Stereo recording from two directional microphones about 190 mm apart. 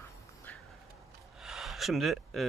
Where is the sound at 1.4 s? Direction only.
Centre (ahead or behind).